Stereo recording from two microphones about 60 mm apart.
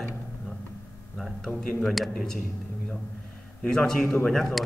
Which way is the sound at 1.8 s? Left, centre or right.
Centre.